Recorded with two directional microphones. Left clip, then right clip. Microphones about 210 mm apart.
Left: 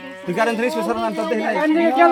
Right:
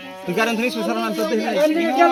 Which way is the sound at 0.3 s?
20° left (ahead or behind).